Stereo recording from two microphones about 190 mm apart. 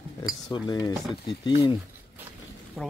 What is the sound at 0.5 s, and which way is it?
Speech, 20° left (ahead or behind).